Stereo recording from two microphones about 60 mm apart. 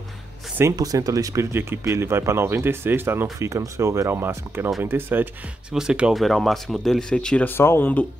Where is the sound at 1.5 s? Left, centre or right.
Right.